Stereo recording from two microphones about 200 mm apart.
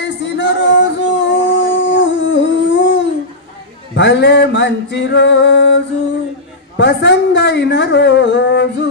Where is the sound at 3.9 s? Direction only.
60° left (ahead or behind).